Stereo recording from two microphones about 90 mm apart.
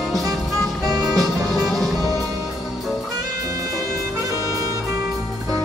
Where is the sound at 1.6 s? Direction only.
Centre (ahead or behind).